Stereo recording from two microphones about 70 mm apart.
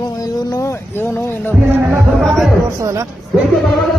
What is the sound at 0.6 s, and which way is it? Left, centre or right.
Speech, left.